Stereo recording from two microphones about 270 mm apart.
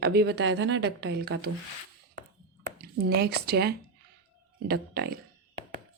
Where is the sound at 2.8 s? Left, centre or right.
Right.